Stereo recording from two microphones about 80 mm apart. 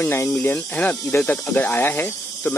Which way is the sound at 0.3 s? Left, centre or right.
Centre.